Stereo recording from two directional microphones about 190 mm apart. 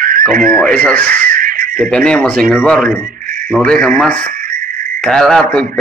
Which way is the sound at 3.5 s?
5° left (ahead or behind).